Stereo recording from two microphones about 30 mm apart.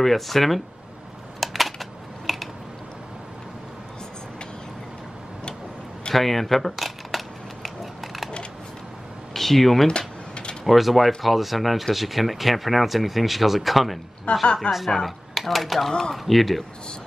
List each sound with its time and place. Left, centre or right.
0.0 s speech: centre
1.4 s typing: centre
6.1 s camera: centre
9.3 s speech: centre
9.8 s a sound: left
10.6 s speech: centre
14.4 s speech: left
15.0 s speech: centre